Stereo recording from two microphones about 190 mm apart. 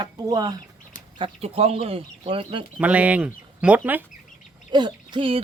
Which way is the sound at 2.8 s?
5° right (ahead or behind).